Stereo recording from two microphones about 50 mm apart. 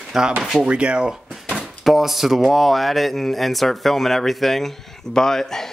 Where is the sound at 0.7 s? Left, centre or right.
Right.